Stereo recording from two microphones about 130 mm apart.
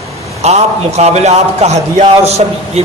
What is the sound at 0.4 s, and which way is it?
A man's voice, 55° right (ahead or behind).